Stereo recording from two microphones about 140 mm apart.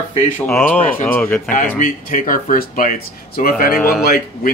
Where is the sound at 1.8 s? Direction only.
75° left (ahead or behind).